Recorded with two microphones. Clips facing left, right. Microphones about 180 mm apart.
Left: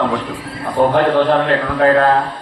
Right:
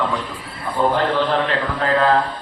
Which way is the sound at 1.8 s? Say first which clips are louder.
Left 6 dB; 50° left (ahead or behind).